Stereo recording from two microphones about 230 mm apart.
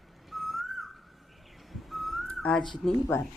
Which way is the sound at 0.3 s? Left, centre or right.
Centre.